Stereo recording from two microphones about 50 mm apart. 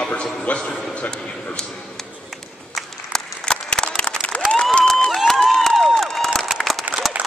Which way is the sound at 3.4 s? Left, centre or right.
Centre.